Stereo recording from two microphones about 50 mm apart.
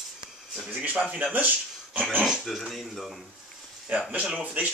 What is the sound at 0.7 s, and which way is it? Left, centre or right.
Speech, right.